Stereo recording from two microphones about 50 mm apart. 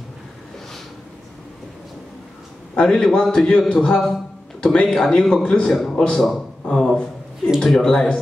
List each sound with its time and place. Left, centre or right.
2.7 s a man's voice: centre
5.7 s a man's voice: centre
6.7 s a sound: centre
7.6 s speech: centre